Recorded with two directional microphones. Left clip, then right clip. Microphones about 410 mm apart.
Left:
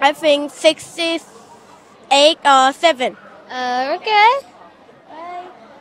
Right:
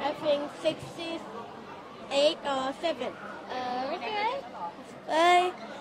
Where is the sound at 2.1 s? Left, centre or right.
Left.